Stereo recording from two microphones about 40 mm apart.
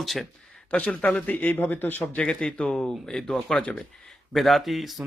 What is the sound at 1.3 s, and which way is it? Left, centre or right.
Speech, left.